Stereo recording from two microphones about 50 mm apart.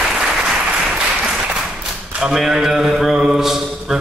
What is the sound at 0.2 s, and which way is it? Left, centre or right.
Applause, centre.